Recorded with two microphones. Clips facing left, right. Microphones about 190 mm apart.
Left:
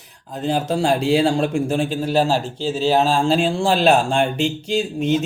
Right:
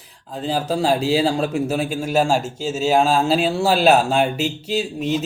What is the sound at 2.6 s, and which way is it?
Speech, 5° right (ahead or behind).